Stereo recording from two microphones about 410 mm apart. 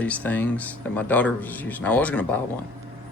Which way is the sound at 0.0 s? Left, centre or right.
Centre.